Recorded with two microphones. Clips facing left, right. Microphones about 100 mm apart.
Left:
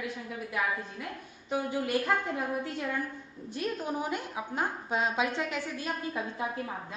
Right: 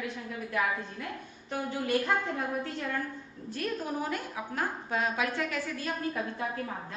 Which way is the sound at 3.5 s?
20° left (ahead or behind).